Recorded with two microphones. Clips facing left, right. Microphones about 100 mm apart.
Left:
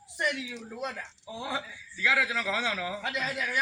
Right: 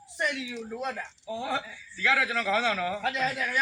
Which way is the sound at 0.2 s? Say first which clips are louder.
Right 1 dB; 10° left (ahead or behind).